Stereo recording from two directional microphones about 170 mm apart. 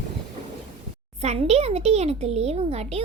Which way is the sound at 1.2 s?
40° right (ahead or behind).